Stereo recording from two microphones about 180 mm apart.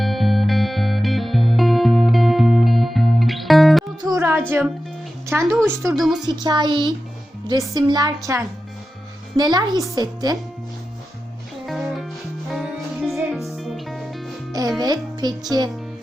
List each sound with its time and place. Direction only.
0.0 s music: centre (ahead or behind)
4.0 s music: 15° right (ahead or behind)
5.3 s a woman's voice: 15° right (ahead or behind)
5.9 s a woman's voice: centre (ahead or behind)
6.2 s a woman's voice: 25° right (ahead or behind)
11.6 s music: centre (ahead or behind)
14.8 s a child's voice: 20° right (ahead or behind)